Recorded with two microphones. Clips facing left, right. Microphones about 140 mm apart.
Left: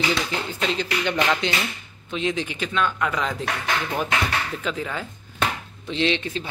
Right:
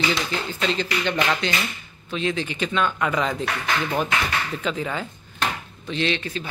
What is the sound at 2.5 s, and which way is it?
Speech, centre (ahead or behind).